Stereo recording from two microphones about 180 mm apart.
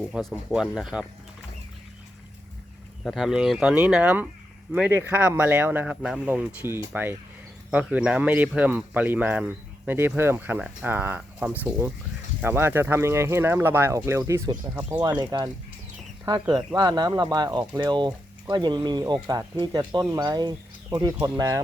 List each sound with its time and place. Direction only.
0.1 s speech: centre (ahead or behind)
3.0 s speech: centre (ahead or behind); by 21.6 s 20° right (ahead or behind)